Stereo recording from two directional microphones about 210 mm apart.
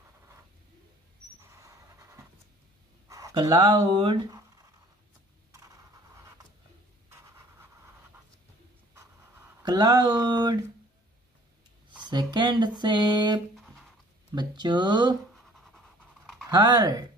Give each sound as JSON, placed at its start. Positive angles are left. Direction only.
{"t": 1.4, "sound": "pant", "side_deg": -15}
{"t": 3.1, "sound": "speech", "side_deg": -15}
{"t": 9.6, "sound": "speech", "side_deg": -20}
{"t": 12.0, "sound": "speech", "side_deg": -20}
{"t": 13.6, "sound": "writing", "side_deg": 0}
{"t": 14.3, "sound": "speech", "side_deg": -20}
{"t": 15.3, "sound": "pant", "side_deg": 0}
{"t": 16.4, "sound": "speech", "side_deg": -20}